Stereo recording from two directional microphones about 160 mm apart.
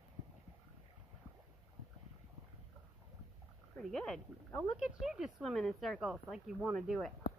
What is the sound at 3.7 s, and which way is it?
Speech, 5° left (ahead or behind).